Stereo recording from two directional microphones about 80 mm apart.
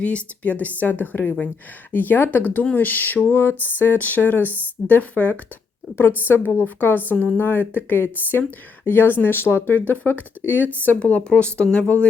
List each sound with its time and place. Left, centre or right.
0.0 s speech: centre